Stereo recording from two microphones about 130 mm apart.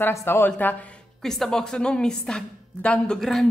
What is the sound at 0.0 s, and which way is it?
A woman's voice, 20° left (ahead or behind).